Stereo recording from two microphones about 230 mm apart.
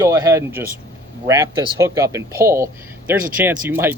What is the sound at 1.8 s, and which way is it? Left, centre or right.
Speech, centre.